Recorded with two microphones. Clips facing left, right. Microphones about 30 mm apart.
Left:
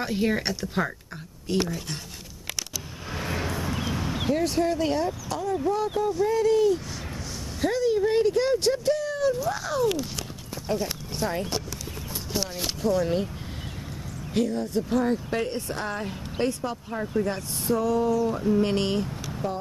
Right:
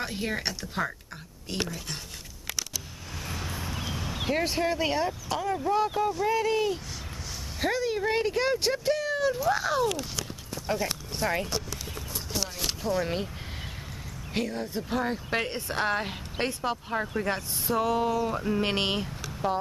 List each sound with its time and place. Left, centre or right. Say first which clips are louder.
0.0 s speech: left 5 dB; centre
3.1 s vehicle: left 7 dB; left
3.5 s a sound: left 5 dB; centre
4.3 s speech: left 3 dB; right
6.2 s speech: left 7 dB; centre
12.3 s speech: left 3 dB; centre
12.9 s speech: left 4 dB; centre
14.3 s speech: left 5 dB; right
15.8 s speech: right 3 dB; right
17.0 s speech: left 4 dB; centre
17.7 s speech: left 2 dB; right
18.3 s speech: left 4 dB; right
18.6 s speech: left 3 dB; right
19.4 s speech: right 3 dB; right